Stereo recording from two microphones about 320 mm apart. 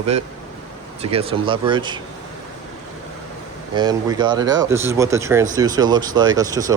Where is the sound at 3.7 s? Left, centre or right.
Centre.